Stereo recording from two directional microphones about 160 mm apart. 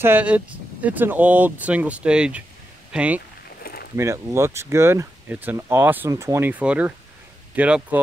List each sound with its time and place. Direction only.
0.0 s speech: 10° right (ahead or behind)
3.6 s a sound: 75° left (ahead or behind)
3.9 s speech: 15° right (ahead or behind)